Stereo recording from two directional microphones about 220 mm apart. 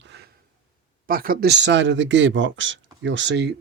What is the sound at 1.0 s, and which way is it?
Speech, 40° right (ahead or behind).